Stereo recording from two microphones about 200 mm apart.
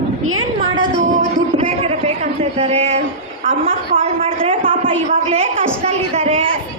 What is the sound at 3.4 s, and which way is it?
Speech, 40° right (ahead or behind).